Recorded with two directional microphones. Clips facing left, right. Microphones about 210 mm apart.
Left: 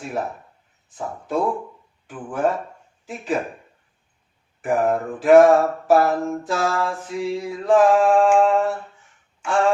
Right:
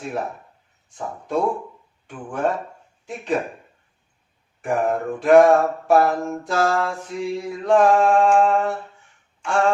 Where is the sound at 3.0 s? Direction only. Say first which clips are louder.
Right 1 dB; centre (ahead or behind).